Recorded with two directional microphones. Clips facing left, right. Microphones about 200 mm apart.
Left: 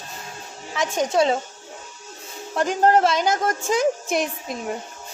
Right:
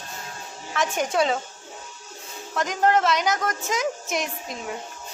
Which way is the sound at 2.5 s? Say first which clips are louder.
Left 3 dB; 30° left (ahead or behind).